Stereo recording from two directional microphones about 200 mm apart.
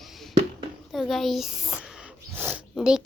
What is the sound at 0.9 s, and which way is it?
A woman's voice, centre (ahead or behind).